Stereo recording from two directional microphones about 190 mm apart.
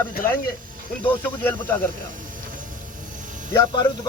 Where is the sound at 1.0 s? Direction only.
10° left (ahead or behind).